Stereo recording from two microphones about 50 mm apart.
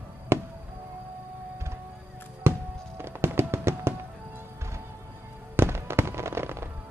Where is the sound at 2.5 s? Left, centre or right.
Right.